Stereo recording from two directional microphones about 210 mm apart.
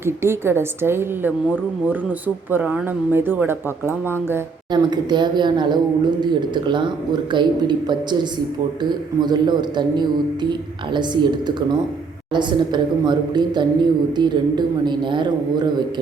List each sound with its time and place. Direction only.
0.0 s a woman's voice: 10° right (ahead or behind)